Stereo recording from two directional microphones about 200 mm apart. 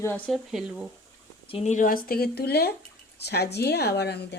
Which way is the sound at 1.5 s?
30° left (ahead or behind).